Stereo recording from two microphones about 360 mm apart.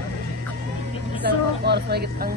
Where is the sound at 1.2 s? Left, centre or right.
Right.